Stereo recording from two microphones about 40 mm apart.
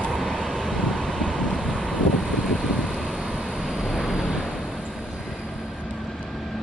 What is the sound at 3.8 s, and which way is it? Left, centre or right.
Vehicle, centre.